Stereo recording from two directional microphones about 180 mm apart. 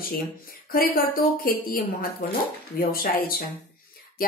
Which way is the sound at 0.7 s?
55° left (ahead or behind).